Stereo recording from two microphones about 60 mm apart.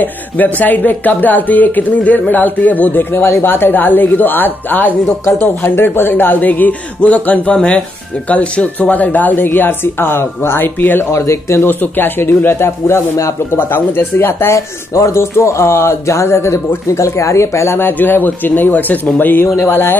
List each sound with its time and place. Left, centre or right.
0.0 s speech: left
5.0 s speech: left
11.1 s speech: left
11.6 s speech: left
14.5 s speech: left
19.4 s speech: left